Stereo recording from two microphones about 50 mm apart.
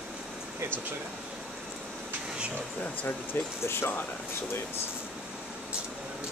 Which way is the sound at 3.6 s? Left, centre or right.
Left.